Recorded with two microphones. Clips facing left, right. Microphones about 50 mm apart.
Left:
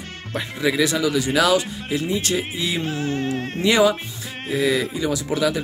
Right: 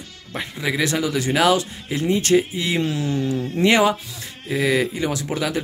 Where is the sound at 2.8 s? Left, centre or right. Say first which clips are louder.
Right 1 dB; left.